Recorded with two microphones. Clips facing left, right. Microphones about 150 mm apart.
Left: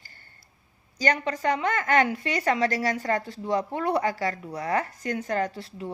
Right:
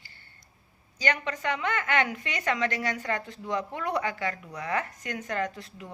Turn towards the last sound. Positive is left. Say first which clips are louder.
# left 3 dB
turn(degrees=30)  # may be behind; listen again after turning